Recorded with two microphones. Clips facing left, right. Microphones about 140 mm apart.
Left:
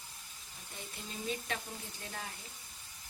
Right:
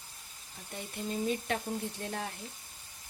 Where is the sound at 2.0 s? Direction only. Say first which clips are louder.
Right 8 dB; 50° right (ahead or behind).